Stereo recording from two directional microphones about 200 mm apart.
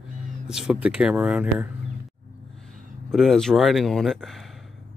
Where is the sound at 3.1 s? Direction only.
Centre (ahead or behind).